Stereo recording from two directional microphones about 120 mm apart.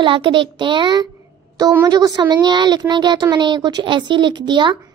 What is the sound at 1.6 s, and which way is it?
Speech, 25° right (ahead or behind).